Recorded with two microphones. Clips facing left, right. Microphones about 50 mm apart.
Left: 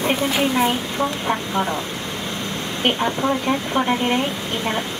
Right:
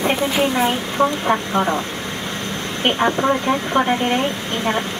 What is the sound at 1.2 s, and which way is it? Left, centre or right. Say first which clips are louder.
Speech: right 3 dB; centre.